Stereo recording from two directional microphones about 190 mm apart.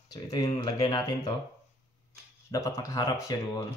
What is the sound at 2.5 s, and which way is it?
A man's voice, 15° left (ahead or behind).